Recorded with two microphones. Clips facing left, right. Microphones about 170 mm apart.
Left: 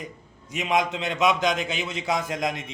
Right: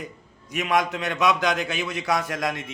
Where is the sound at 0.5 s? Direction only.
20° left (ahead or behind).